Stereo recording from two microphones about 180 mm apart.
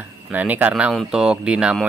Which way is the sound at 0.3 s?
10° right (ahead or behind).